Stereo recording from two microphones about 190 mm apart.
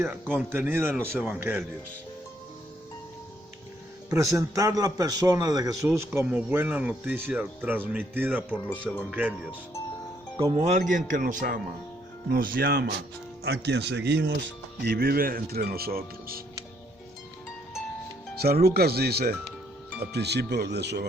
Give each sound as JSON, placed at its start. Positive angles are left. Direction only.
{"t": 0.0, "sound": "speech", "side_deg": -10}
{"t": 4.1, "sound": "speech", "side_deg": -15}
{"t": 10.5, "sound": "speech", "side_deg": -35}
{"t": 18.3, "sound": "speech", "side_deg": -55}